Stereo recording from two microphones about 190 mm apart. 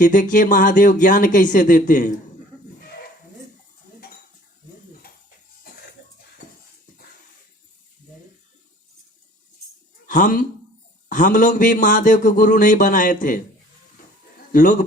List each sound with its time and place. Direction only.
0.0 s speech: 40° left (ahead or behind)
5.7 s a sound: 55° left (ahead or behind)
10.1 s speech: 45° left (ahead or behind)